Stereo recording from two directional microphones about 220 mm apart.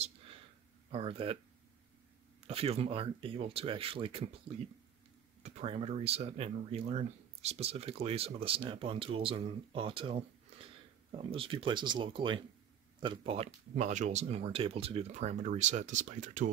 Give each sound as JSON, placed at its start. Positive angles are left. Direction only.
{"t": 0.9, "sound": "speech", "side_deg": -25}
{"t": 2.4, "sound": "speech", "side_deg": -25}
{"t": 5.4, "sound": "speech", "side_deg": -25}